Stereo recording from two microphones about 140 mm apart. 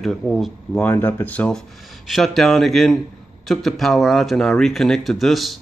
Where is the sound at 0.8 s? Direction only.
15° left (ahead or behind).